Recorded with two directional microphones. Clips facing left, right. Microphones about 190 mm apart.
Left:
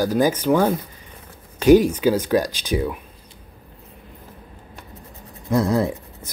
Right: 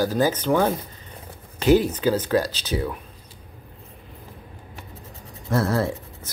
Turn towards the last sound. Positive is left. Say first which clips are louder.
# left 2 dB
turn(degrees=15)  # may be behind; listen again after turning